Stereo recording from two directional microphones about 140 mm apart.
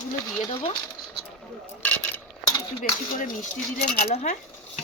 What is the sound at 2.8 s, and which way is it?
Speech, 75° left (ahead or behind).